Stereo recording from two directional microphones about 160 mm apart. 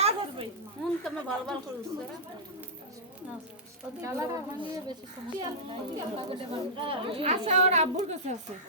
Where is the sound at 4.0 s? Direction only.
20° right (ahead or behind).